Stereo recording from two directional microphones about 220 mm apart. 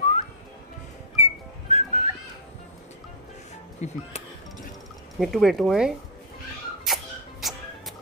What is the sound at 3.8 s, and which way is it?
Speech, 30° left (ahead or behind).